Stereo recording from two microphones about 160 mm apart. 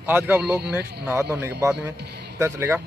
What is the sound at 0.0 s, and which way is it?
Speech, 10° right (ahead or behind).